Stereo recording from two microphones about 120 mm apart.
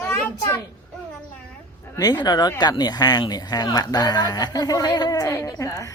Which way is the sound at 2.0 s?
35° left (ahead or behind).